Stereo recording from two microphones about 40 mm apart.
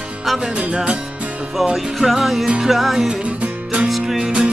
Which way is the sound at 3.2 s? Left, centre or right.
Right.